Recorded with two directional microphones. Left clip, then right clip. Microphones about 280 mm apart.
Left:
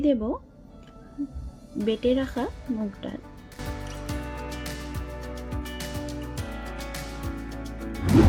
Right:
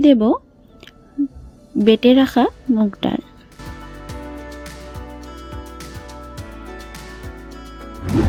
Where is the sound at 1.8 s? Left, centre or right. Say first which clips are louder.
Right 11 dB; right.